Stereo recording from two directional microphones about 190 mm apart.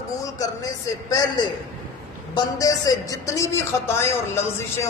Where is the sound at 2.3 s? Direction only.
20° left (ahead or behind).